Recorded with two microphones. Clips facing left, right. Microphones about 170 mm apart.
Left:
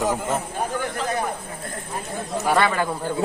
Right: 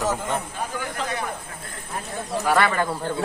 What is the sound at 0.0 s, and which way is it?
Speech, 10° left (ahead or behind).